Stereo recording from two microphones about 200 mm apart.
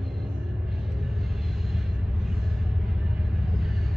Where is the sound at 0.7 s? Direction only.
Centre (ahead or behind).